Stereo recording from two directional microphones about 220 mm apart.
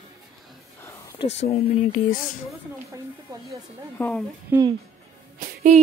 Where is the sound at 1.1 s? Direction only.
30° left (ahead or behind).